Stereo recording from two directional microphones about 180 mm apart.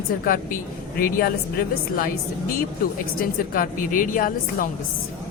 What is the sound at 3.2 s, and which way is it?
A woman's voice, 50° left (ahead or behind).